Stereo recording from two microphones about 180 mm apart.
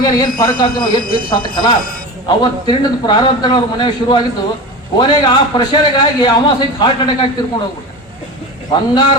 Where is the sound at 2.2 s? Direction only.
25° left (ahead or behind).